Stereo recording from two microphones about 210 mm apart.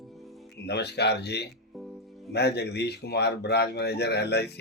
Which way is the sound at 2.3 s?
50° left (ahead or behind).